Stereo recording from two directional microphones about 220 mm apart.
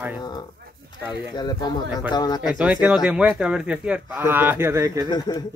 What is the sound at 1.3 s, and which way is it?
Speech, 20° left (ahead or behind).